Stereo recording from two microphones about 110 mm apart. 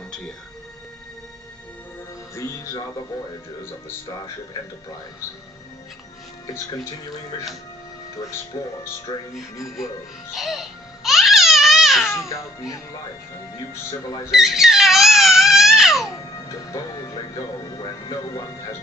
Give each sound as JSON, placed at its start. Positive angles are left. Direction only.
{"t": 2.3, "sound": "music", "side_deg": 30}
{"t": 8.5, "sound": "speech", "side_deg": 40}
{"t": 9.3, "sound": "speech", "side_deg": 0}
{"t": 10.3, "sound": "music", "side_deg": 0}
{"t": 14.3, "sound": "crying", "side_deg": -5}
{"t": 16.4, "sound": "speech", "side_deg": 35}